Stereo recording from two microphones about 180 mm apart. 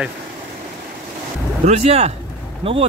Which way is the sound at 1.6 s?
35° right (ahead or behind).